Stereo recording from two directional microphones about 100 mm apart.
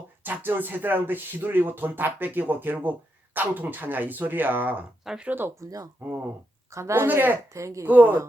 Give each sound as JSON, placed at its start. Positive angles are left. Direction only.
{"t": 0.2, "sound": "speech", "side_deg": -20}
{"t": 5.0, "sound": "speech", "side_deg": -5}
{"t": 5.3, "sound": "speech", "side_deg": -20}
{"t": 6.7, "sound": "speech", "side_deg": -30}
{"t": 7.5, "sound": "a woman's voice", "side_deg": -30}
{"t": 7.9, "sound": "speech", "side_deg": -15}